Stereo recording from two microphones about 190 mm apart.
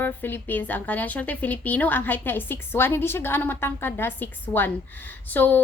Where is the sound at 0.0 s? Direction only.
10° left (ahead or behind).